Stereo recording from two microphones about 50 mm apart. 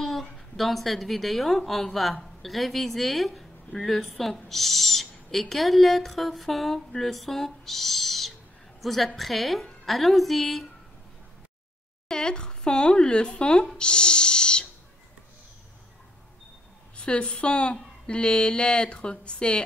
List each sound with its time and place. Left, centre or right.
0.0 s a woman's voice: centre
12.1 s speech: centre
16.9 s a woman's voice: left